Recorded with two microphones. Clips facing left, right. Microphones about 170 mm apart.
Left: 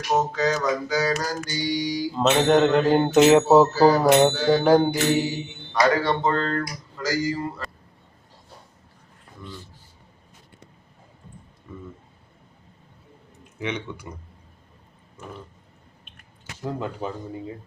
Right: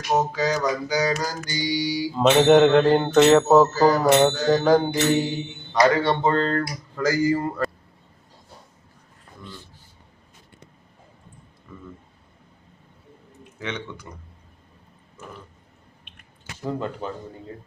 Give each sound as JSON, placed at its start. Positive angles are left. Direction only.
{"t": 0.2, "sound": "mantra", "side_deg": -10}
{"t": 2.5, "sound": "speech", "side_deg": 0}
{"t": 3.0, "sound": "music", "side_deg": 10}
{"t": 6.0, "sound": "speech", "side_deg": -30}
{"t": 6.9, "sound": "speech", "side_deg": -55}
{"t": 13.6, "sound": "music", "side_deg": 10}
{"t": 16.6, "sound": "music", "side_deg": 5}